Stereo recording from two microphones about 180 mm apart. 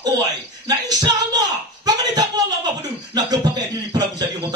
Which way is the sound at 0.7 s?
20° right (ahead or behind).